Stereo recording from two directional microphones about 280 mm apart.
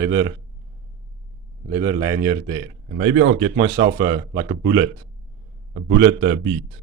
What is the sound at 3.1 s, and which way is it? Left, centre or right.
Speech, right.